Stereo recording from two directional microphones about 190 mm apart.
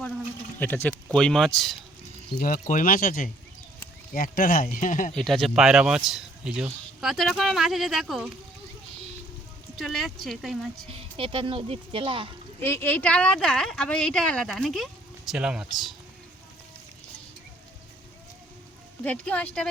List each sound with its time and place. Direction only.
0.6 s speech: 10° left (ahead or behind)
2.4 s speech: 45° left (ahead or behind)
5.1 s speech: centre (ahead or behind)
9.7 s speech: centre (ahead or behind)
10.8 s speech: 30° right (ahead or behind)
12.6 s speech: 10° left (ahead or behind)
19.0 s speech: 5° left (ahead or behind)